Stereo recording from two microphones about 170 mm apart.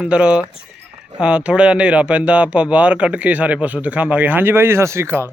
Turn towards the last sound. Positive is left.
turn(degrees=-15)  # may be behind; listen again after turning